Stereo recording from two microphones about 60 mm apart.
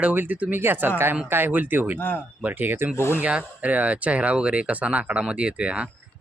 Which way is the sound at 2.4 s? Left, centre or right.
Right.